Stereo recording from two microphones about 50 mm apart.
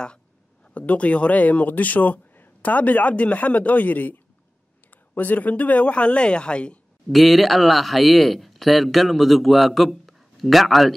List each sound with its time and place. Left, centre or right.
0.7 s speech: left
7.1 s speech: centre